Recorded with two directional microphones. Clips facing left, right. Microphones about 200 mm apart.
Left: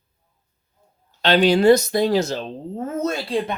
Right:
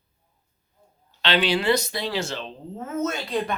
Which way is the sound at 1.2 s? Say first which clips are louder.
Left 7 dB; 45° left (ahead or behind).